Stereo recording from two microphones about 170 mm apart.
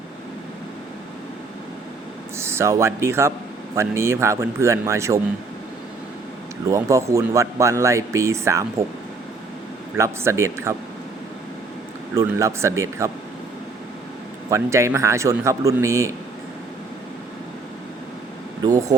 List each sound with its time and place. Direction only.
2.4 s speech: 15° right (ahead or behind)
6.7 s speech: 20° right (ahead or behind)
10.0 s speech: 15° right (ahead or behind)
12.1 s speech: 15° right (ahead or behind)
14.5 s speech: 15° right (ahead or behind)
18.6 s speech: 20° right (ahead or behind)